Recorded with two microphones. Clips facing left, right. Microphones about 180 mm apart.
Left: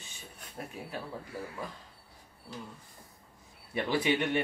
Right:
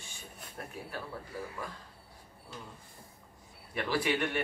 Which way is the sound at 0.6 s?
25° left (ahead or behind).